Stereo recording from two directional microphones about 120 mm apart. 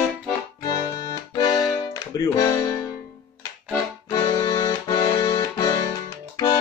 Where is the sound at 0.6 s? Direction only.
30° left (ahead or behind).